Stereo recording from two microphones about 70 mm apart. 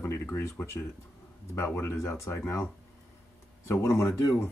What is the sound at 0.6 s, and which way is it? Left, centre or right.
Speech, left.